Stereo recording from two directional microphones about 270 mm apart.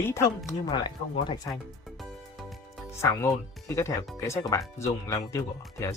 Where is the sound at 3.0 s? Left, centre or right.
Centre.